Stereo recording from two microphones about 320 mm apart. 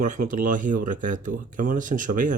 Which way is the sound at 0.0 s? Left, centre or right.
Right.